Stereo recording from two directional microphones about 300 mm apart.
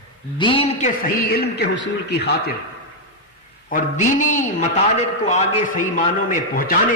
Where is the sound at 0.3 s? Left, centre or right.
Centre; by 2.3 s left.